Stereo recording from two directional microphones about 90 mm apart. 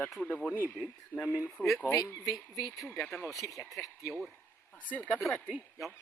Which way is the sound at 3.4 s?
30° left (ahead or behind).